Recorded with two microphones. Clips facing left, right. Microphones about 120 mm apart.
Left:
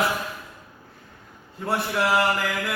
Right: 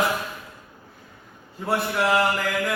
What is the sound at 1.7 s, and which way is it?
Speech, centre (ahead or behind).